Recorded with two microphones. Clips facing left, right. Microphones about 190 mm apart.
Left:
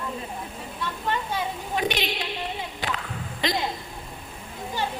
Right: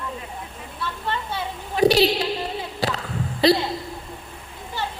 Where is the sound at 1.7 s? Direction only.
35° right (ahead or behind).